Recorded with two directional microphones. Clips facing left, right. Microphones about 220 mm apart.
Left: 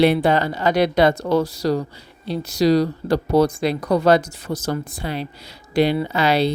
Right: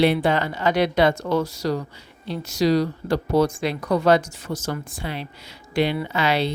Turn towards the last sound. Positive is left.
turn(degrees=35)  # may be behind; listen again after turning